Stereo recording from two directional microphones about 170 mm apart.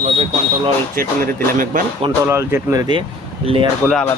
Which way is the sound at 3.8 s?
15° right (ahead or behind).